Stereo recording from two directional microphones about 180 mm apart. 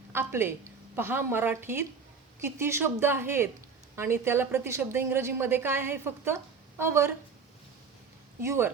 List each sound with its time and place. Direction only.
0.1 s a woman's voice: 15° right (ahead or behind)
8.4 s a woman's voice: 15° right (ahead or behind)